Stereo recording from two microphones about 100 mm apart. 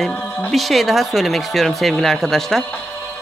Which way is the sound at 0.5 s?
Centre (ahead or behind).